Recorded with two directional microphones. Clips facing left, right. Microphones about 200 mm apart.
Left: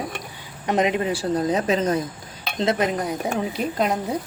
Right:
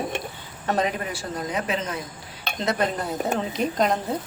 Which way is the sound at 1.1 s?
30° left (ahead or behind).